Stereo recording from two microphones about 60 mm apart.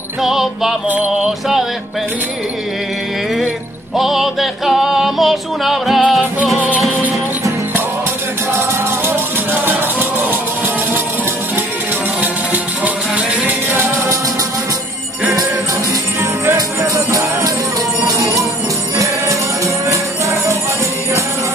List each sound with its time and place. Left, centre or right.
0.2 s music: centre
3.9 s music: centre
9.0 s music: right
12.8 s music: right
16.5 s music: right
19.9 s music: right